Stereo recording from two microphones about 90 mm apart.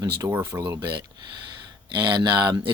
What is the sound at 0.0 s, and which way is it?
Speech, 35° right (ahead or behind).